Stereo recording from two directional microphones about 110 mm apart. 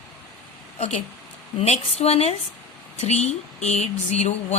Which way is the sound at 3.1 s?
85° left.